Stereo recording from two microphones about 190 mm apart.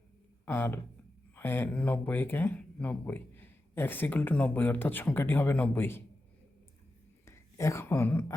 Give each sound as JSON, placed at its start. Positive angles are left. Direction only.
{"t": 0.4, "sound": "speech", "side_deg": 10}
{"t": 7.3, "sound": "a woman's voice", "side_deg": 15}